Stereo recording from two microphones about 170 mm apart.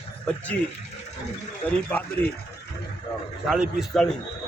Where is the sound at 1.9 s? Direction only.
10° left (ahead or behind).